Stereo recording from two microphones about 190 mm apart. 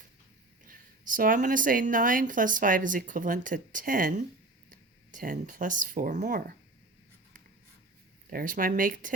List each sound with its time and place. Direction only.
0.6 s a woman's voice: 45° right (ahead or behind)
8.3 s a woman's voice: 45° right (ahead or behind)